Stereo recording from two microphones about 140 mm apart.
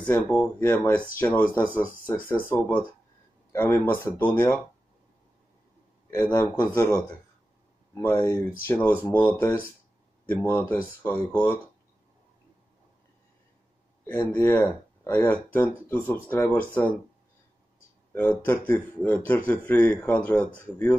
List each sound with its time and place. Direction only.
0.0 s speech: 10° left (ahead or behind)
3.5 s speech: 15° left (ahead or behind)
6.2 s speech: 15° left (ahead or behind)
14.0 s speech: 15° left (ahead or behind)
18.1 s speech: 15° left (ahead or behind)